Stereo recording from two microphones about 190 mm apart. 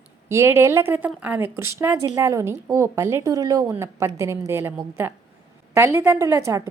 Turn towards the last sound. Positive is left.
turn(degrees=-15)  # may be behind; listen again after turning